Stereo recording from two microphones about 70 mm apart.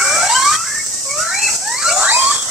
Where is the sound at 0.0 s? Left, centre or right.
Centre.